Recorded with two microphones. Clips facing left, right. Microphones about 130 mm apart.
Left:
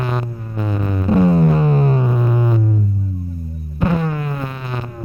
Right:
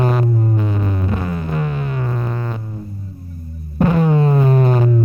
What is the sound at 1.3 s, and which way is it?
Music, 30° left (ahead or behind).